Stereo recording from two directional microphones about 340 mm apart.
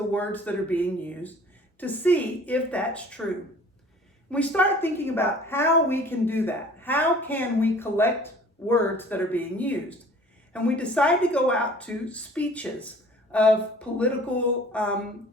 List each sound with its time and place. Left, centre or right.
0.1 s speech: centre
4.3 s a woman's voice: centre